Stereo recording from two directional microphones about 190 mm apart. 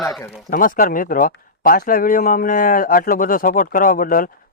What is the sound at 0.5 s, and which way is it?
Speech, 45° left (ahead or behind).